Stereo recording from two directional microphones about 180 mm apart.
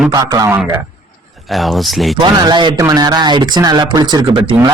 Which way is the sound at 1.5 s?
Centre (ahead or behind).